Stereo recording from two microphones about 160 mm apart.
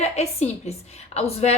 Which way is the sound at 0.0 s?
40° left (ahead or behind).